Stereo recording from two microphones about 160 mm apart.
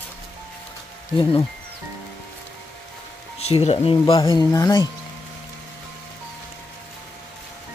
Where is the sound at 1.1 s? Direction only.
30° left (ahead or behind).